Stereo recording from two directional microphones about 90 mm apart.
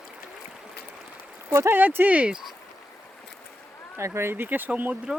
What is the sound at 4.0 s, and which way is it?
Speech, 30° right (ahead or behind).